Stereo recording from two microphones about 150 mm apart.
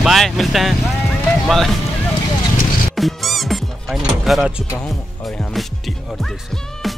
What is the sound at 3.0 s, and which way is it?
Music, centre (ahead or behind).